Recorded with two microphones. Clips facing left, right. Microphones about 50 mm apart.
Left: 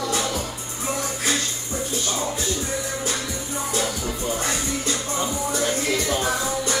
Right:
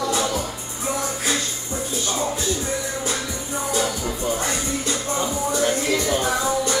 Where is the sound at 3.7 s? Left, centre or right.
Right.